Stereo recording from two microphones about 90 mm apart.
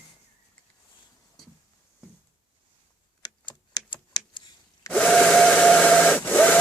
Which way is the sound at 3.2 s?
55° left (ahead or behind).